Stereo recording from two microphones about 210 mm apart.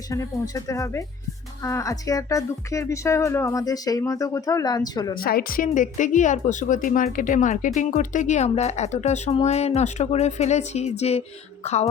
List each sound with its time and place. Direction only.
0.1 s speech: 15° left (ahead or behind)
5.1 s speech: 45° left (ahead or behind)